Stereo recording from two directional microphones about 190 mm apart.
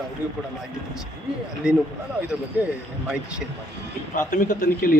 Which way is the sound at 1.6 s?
5° right (ahead or behind).